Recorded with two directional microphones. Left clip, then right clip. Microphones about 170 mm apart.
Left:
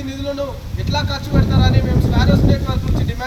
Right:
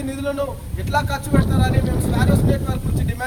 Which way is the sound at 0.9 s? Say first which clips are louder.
Right 2 dB; 20° right (ahead or behind).